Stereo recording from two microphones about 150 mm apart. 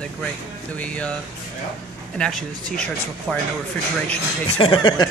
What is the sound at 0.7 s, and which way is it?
Speech, 10° left (ahead or behind).